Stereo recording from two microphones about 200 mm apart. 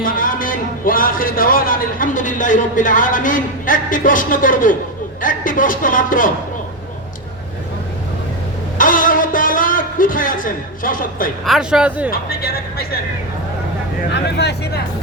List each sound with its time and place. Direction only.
0.0 s a man's voice: 45° left (ahead or behind)
8.8 s music: 45° left (ahead or behind)
11.4 s speech: centre (ahead or behind)
12.1 s speech: 50° left (ahead or behind)
14.1 s speech: 60° left (ahead or behind)